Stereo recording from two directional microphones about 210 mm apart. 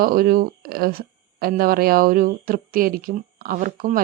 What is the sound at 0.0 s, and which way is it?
A woman's voice, 45° right (ahead or behind).